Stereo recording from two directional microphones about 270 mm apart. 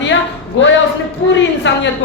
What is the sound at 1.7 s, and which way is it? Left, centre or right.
Speech, left.